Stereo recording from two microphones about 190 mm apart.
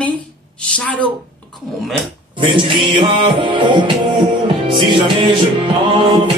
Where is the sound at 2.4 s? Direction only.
25° right (ahead or behind).